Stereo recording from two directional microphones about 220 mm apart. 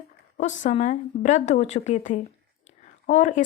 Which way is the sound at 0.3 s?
30° left (ahead or behind).